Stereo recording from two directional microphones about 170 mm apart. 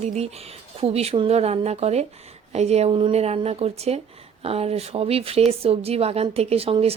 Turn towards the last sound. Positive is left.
turn(degrees=-35)  # may be behind; listen again after turning